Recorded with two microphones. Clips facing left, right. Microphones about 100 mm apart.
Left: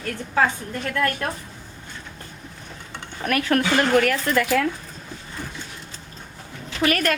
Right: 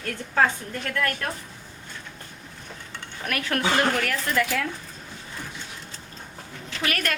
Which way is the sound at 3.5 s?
45° left (ahead or behind).